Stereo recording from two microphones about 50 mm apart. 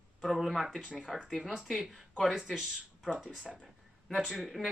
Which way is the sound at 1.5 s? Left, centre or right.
Centre.